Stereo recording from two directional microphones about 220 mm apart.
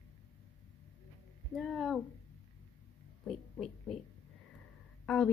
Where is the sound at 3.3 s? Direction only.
Centre (ahead or behind).